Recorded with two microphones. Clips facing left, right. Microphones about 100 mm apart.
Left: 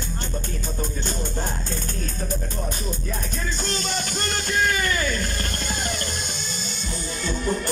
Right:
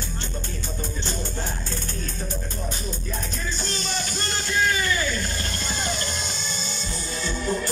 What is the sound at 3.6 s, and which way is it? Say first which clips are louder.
Music: left 3 dB; 55° left (ahead or behind).